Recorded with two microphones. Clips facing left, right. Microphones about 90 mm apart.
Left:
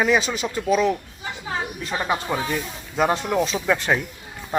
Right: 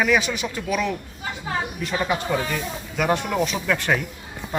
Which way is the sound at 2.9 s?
30° left (ahead or behind).